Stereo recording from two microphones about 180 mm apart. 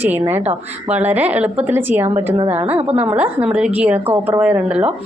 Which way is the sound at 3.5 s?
5° right (ahead or behind).